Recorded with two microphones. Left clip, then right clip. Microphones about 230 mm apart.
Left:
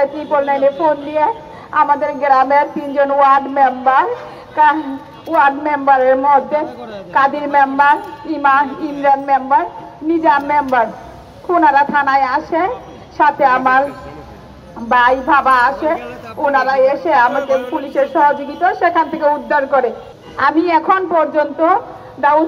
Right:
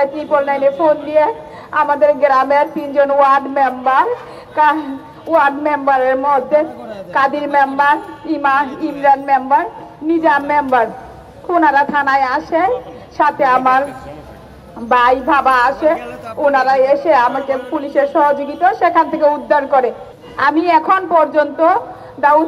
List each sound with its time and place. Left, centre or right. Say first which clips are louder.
0.0 s a woman's voice: right 1 dB; right
14.9 s a woman's voice: even; right